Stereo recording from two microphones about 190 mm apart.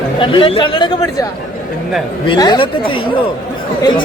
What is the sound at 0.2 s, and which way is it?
Speech, 25° left (ahead or behind).